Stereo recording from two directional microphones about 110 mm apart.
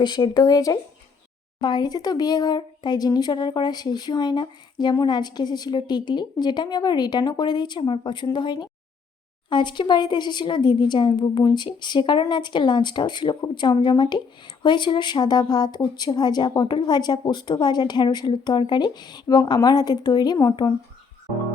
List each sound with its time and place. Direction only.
0.0 s speech: 40° left (ahead or behind)